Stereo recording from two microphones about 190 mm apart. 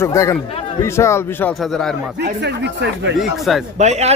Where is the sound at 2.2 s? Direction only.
65° right (ahead or behind).